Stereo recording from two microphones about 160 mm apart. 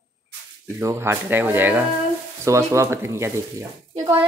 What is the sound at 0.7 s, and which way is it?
Speech, 15° right (ahead or behind).